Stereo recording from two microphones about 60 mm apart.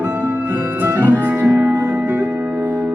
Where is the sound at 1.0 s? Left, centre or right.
Right.